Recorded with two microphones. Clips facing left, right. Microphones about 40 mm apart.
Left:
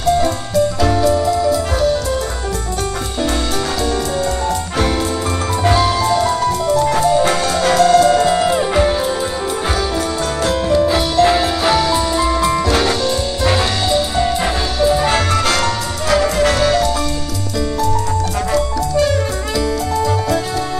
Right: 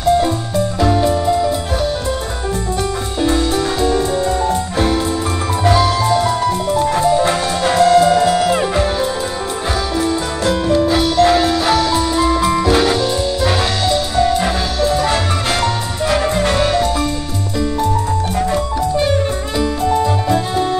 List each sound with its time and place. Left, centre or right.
3.8 s music: right
5.6 s music: centre
6.0 s music: centre
8.7 s music: centre
10.4 s music: centre
19.6 s music: right